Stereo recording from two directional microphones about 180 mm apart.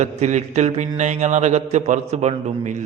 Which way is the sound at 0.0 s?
40° right (ahead or behind).